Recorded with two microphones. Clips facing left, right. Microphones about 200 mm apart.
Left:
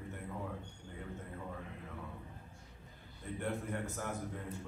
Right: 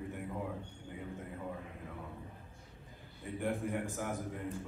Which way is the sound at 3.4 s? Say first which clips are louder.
Right 3 dB; 15° right (ahead or behind).